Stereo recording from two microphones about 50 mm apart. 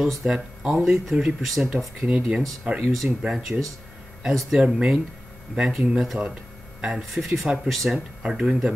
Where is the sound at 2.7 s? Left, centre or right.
Centre.